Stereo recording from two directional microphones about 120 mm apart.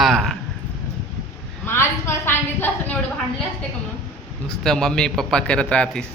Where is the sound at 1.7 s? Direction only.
20° left (ahead or behind).